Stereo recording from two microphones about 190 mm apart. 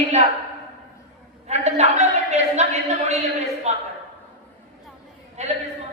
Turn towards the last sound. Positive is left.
turn(degrees=-35)  # may be behind; listen again after turning